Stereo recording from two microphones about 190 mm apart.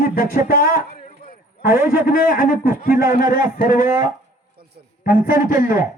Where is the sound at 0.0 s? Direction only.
50° left (ahead or behind).